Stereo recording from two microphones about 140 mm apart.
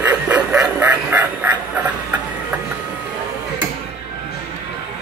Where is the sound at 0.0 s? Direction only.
10° right (ahead or behind).